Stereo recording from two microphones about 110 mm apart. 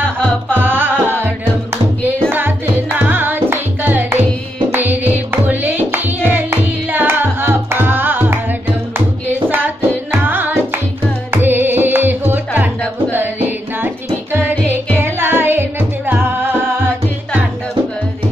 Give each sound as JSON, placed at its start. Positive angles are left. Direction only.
{"t": 0.5, "sound": "music", "side_deg": -20}
{"t": 9.5, "sound": "music", "side_deg": -20}